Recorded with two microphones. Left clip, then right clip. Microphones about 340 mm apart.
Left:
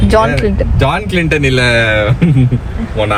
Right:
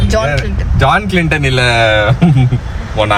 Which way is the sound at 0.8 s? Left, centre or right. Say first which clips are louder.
Right 4 dB; centre.